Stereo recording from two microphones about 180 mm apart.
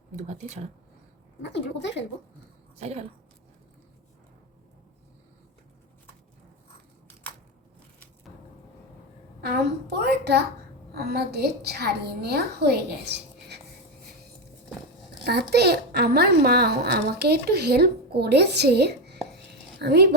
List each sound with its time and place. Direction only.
0.2 s speech: 40° right (ahead or behind)
1.4 s a woman's voice: 75° left (ahead or behind)
2.7 s speech: 35° right (ahead or behind)
9.4 s a woman's voice: 65° right (ahead or behind)
15.2 s a woman's voice: 65° right (ahead or behind)